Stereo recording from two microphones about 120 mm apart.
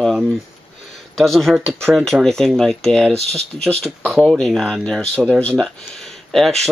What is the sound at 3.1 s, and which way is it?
Speech, 60° right (ahead or behind).